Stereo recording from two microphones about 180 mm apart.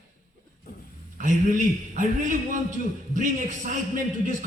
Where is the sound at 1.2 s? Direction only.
45° right (ahead or behind).